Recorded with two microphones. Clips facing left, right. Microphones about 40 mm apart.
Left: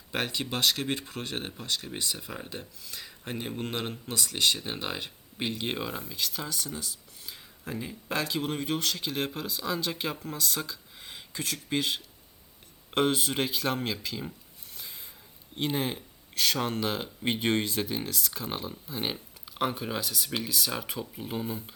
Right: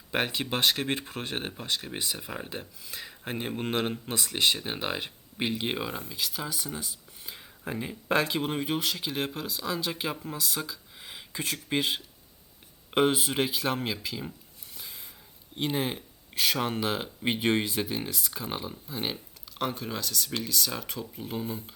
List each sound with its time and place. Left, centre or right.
0.1 s speech: centre
8.4 s speech: centre
15.5 s speech: centre